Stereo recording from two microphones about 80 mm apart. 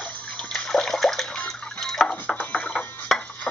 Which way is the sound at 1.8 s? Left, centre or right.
Centre.